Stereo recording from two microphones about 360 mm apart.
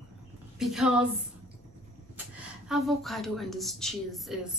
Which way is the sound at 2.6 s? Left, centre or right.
Centre.